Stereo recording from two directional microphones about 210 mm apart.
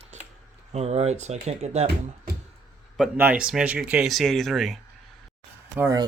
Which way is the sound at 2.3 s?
45° right (ahead or behind).